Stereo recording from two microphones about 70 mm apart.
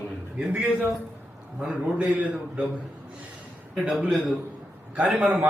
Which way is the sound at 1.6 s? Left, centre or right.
Centre.